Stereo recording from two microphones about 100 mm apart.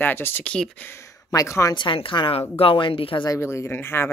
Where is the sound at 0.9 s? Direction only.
35° left (ahead or behind).